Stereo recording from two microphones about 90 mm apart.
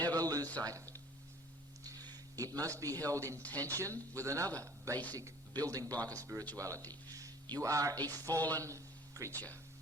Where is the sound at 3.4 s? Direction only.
20° left (ahead or behind).